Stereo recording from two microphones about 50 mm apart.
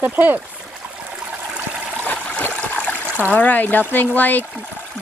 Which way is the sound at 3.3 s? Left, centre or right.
Left.